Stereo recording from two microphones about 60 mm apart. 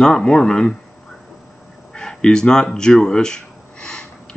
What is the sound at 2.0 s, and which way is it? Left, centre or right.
Speech, centre.